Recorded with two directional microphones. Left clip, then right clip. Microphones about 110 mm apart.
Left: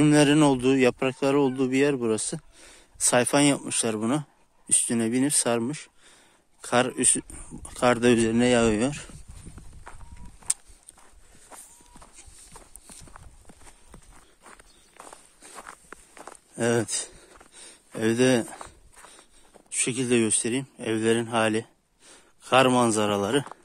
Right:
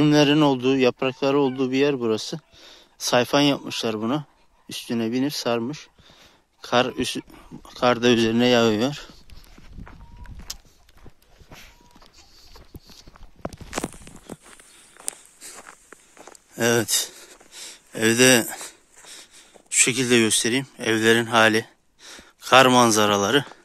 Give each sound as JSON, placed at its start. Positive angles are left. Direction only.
{"t": 0.0, "sound": "speech", "side_deg": 25}
{"t": 6.6, "sound": "speech", "side_deg": 25}
{"t": 8.2, "sound": "speech", "side_deg": 10}
{"t": 10.5, "sound": "a sound", "side_deg": 45}
{"t": 12.0, "sound": "clip-clop", "side_deg": 35}
{"t": 14.4, "sound": "walk", "side_deg": -5}
{"t": 15.5, "sound": "a sound", "side_deg": 10}